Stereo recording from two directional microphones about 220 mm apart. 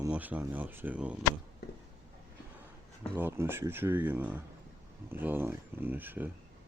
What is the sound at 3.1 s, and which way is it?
Speech, 10° right (ahead or behind).